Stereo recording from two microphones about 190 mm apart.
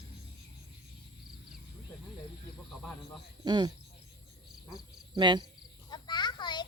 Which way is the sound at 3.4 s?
20° right (ahead or behind).